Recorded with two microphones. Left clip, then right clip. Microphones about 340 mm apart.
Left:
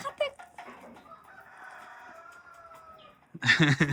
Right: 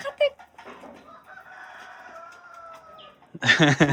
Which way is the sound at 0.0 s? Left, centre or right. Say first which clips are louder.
Right 8 dB; centre.